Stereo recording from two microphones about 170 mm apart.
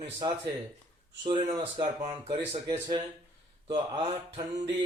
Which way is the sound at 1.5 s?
35° right (ahead or behind).